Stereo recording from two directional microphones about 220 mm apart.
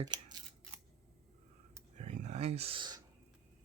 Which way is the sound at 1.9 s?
35° right (ahead or behind).